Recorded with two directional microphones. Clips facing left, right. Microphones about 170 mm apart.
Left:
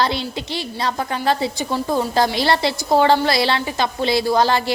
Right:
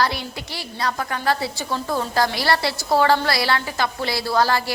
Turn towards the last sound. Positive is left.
turn(degrees=20)  # may be behind; listen again after turning